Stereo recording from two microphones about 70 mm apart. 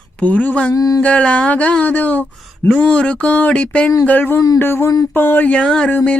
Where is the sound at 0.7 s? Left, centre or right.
Left.